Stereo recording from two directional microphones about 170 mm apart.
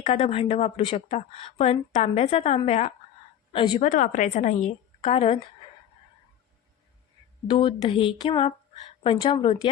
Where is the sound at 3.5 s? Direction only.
25° left (ahead or behind).